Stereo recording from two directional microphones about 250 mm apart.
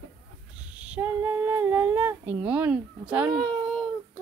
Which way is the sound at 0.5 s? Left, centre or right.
Centre.